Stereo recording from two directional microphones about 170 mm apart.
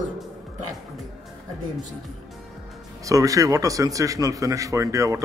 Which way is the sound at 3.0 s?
20° right (ahead or behind).